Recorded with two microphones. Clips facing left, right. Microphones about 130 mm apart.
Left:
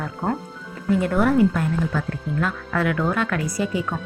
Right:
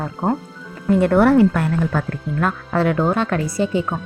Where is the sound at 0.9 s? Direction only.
60° right (ahead or behind).